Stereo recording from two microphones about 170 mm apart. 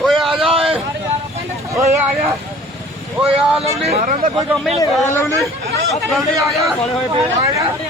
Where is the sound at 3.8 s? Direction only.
40° right (ahead or behind).